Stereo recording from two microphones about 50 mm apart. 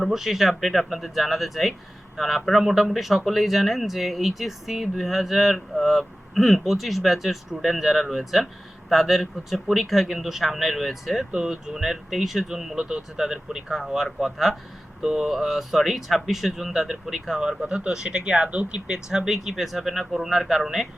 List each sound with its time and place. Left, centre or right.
0.0 s speech: centre
17.6 s speech: right